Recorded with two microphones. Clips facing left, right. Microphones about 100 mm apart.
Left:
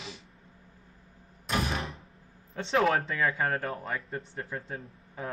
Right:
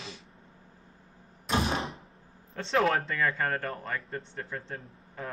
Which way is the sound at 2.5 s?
Centre (ahead or behind).